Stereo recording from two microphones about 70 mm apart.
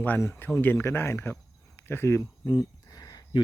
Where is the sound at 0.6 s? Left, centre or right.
Left.